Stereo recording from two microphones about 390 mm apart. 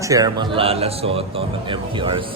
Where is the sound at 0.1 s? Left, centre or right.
Centre.